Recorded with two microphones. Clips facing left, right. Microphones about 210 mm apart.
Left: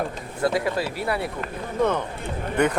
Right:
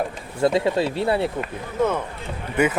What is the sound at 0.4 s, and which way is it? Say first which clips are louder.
Speech: right 4 dB; 25° right (ahead or behind).